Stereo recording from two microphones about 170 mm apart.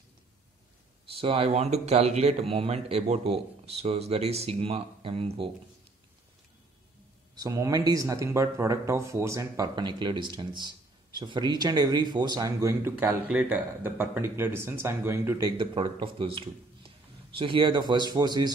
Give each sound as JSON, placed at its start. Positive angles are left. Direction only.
{"t": 1.2, "sound": "speech", "side_deg": -35}
{"t": 7.3, "sound": "speech", "side_deg": -20}
{"t": 15.5, "sound": "a man's voice", "side_deg": -30}